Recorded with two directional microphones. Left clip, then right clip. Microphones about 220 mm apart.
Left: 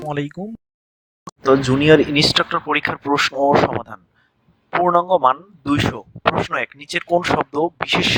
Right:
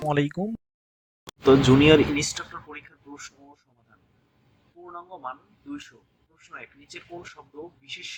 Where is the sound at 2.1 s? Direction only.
40° left (ahead or behind).